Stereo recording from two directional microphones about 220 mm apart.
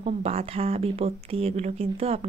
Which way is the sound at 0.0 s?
25° right (ahead or behind).